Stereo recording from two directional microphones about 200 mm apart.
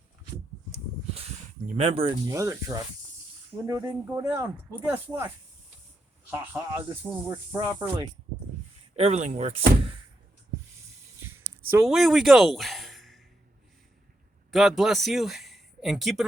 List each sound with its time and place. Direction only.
1.1 s a sound: 35° right (ahead or behind)
1.9 s speech: 25° right (ahead or behind)
6.3 s speech: 10° right (ahead or behind)
9.0 s speech: 35° right (ahead or behind)
11.7 s speech: 5° right (ahead or behind)
14.5 s speech: centre (ahead or behind)